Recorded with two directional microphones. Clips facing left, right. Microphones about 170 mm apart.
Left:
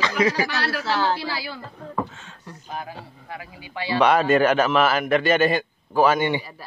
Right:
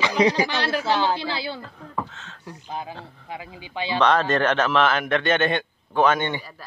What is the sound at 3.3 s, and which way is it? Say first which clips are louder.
Speech: right 2 dB; 20° right (ahead or behind).